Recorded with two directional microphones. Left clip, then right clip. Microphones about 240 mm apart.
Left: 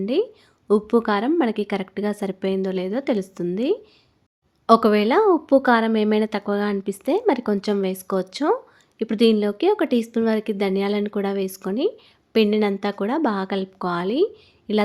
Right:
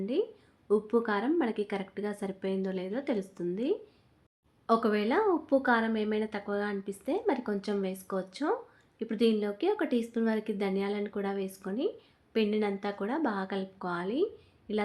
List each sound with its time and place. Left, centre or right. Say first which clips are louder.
0.0 s speech: left 9 dB; left